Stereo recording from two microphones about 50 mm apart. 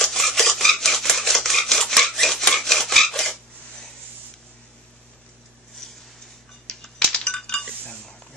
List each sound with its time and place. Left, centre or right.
0.0 s a sound: centre
1.9 s rub: centre
2.5 s filing: centre
6.7 s coin: centre